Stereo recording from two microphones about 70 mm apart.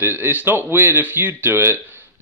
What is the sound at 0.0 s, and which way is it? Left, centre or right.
A man's voice, right.